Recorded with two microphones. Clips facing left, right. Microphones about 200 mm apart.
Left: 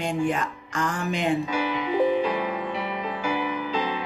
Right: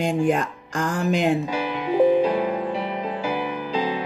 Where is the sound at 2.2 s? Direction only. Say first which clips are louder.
Right 5 dB; 30° right (ahead or behind).